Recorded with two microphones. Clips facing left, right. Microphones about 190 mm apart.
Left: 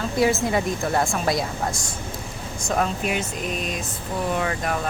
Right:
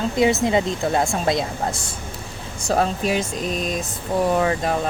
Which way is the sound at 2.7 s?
35° right (ahead or behind).